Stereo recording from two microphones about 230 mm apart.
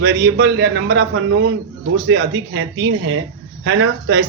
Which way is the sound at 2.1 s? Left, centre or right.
Right.